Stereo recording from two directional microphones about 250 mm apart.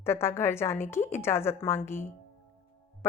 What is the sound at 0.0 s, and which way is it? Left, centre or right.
A woman's voice, centre.